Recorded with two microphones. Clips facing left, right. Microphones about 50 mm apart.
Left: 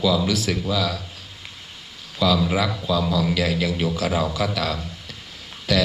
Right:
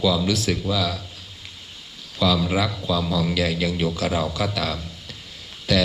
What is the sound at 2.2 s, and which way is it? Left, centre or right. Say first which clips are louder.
Speech: left 1 dB; centre.